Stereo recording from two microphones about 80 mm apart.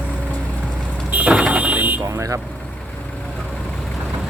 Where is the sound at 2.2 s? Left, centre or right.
Right.